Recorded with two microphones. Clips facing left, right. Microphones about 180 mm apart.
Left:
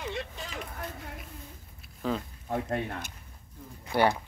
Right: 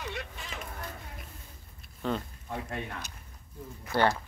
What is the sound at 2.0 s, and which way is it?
Speech, centre (ahead or behind).